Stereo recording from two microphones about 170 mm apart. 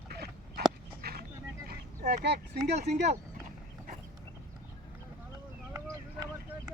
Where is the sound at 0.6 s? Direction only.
70° right (ahead or behind).